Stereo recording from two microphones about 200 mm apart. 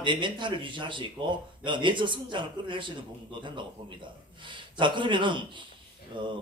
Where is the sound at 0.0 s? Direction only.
25° right (ahead or behind).